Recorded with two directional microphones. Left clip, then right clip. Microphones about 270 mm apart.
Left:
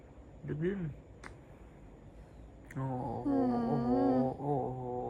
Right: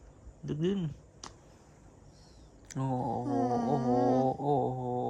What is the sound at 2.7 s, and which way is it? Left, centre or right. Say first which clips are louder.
Mantra: right 5 dB; right.